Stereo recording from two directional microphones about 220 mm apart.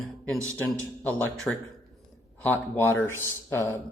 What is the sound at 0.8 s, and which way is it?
A man's voice, 5° left (ahead or behind).